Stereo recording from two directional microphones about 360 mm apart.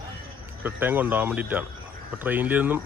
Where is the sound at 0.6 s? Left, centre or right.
Centre.